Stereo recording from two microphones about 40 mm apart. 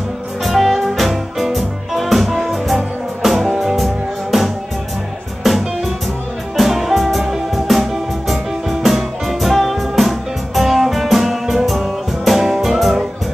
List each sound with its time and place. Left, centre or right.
0.4 s music: centre
6.5 s music: centre